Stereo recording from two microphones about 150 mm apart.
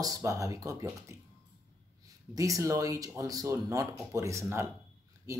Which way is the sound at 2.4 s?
20° right (ahead or behind).